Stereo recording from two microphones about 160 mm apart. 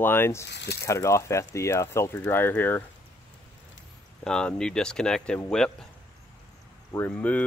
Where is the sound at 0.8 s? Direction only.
20° left (ahead or behind).